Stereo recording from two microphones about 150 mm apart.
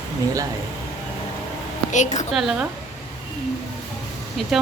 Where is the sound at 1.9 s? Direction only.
55° left (ahead or behind).